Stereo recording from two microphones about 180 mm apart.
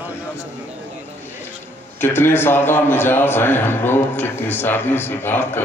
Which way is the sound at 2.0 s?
10° left (ahead or behind).